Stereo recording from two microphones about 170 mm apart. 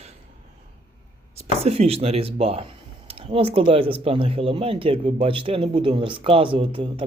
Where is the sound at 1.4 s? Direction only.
35° right (ahead or behind).